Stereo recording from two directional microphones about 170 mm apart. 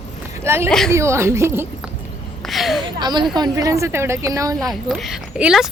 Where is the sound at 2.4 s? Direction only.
Centre (ahead or behind).